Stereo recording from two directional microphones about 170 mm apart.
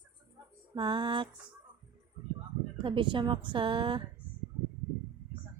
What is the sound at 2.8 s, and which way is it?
A woman's voice, 30° right (ahead or behind).